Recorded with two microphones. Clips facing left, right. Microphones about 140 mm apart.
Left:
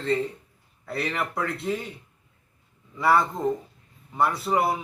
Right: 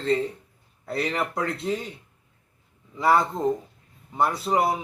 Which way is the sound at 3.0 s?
20° right (ahead or behind).